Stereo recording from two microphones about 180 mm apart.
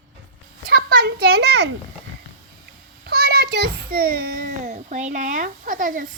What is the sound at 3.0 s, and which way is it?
A child's voice, 60° right (ahead or behind).